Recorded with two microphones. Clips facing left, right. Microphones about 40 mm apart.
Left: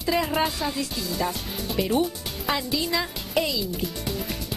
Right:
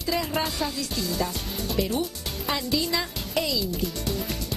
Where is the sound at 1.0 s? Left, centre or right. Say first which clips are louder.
Right 1 dB; centre.